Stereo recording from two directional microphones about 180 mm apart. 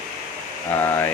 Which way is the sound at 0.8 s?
10° left (ahead or behind).